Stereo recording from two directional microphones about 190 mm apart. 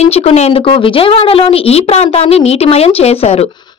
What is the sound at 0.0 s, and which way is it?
Speech, 35° left (ahead or behind).